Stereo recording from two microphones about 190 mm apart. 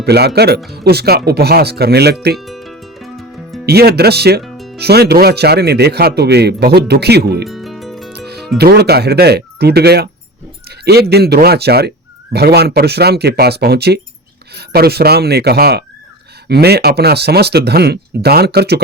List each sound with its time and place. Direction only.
0.0 s speech: 60° right (ahead or behind)
2.4 s music: centre (ahead or behind)
3.7 s speech: 55° right (ahead or behind)
4.4 s music: centre (ahead or behind)
4.8 s speech: 60° right (ahead or behind)
7.4 s music: centre (ahead or behind)
8.5 s speech: 60° right (ahead or behind)
10.7 s a sound: 60° right (ahead or behind)
11.1 s speech: 60° right (ahead or behind)